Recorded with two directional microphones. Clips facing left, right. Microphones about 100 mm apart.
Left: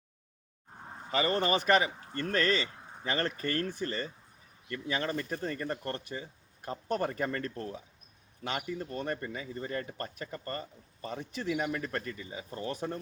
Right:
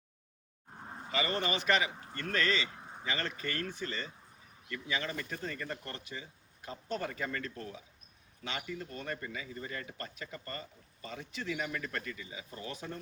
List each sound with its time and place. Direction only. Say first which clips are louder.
1.1 s speech: left 5 dB; 40° left (ahead or behind)